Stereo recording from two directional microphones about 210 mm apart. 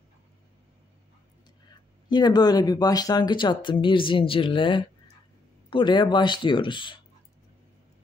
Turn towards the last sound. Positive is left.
turn(degrees=20)  # may be behind; listen again after turning